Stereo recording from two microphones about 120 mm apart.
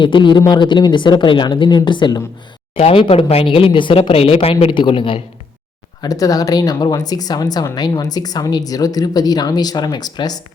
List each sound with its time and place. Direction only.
0.0 s speech: 40° left (ahead or behind)
2.7 s a woman's voice: 50° left (ahead or behind)
6.0 s speech: 30° left (ahead or behind)